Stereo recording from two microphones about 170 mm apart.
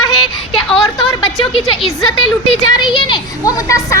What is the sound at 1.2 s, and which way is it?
Speech, 30° left (ahead or behind).